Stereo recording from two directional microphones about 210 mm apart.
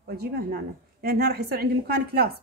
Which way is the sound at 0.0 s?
50° right (ahead or behind).